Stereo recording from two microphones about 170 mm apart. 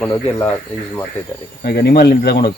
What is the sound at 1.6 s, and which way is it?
Speech, 65° left (ahead or behind).